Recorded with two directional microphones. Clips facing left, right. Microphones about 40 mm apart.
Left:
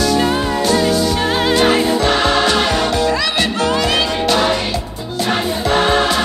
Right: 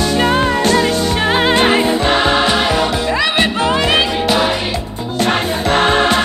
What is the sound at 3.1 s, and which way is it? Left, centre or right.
Music, right.